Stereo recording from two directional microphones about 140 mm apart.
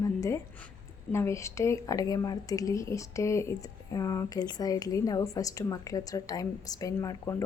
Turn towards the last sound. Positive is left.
turn(degrees=25)  # may be behind; listen again after turning